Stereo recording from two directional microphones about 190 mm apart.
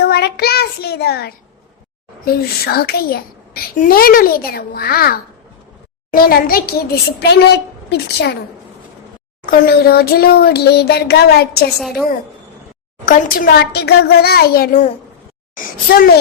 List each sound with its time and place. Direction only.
0.0 s child singing: 55° left (ahead or behind)
2.2 s a child's voice: 55° left (ahead or behind)
9.5 s speech: 55° left (ahead or behind)
11.7 s a woman's voice: centre (ahead or behind)
13.1 s a child's voice: 50° left (ahead or behind)